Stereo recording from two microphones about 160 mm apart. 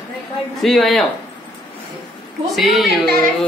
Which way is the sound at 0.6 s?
Centre (ahead or behind).